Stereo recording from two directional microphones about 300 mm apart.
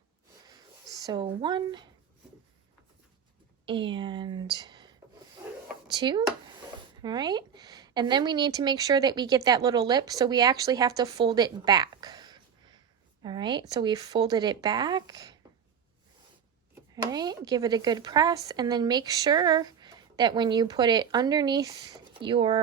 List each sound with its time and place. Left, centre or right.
0.4 s a sound: centre
3.7 s speech: centre
5.9 s speech: centre
16.9 s speech: centre